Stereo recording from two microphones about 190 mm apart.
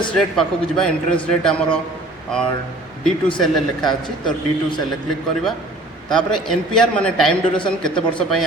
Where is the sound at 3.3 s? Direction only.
Centre (ahead or behind).